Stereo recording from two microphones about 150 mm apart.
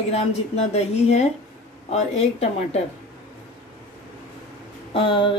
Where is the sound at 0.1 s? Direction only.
45° left (ahead or behind).